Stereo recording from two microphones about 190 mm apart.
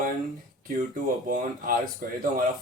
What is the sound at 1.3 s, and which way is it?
Speech, 45° right (ahead or behind).